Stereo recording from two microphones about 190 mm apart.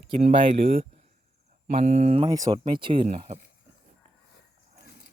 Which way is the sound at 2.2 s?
20° right (ahead or behind).